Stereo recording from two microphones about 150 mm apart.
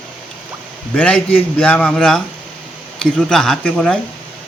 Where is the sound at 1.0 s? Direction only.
10° left (ahead or behind).